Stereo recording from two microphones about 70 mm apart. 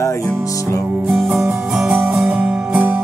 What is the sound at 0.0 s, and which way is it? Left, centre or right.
Music, left.